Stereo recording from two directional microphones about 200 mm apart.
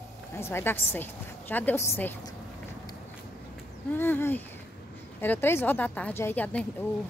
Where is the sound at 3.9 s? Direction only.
10° left (ahead or behind).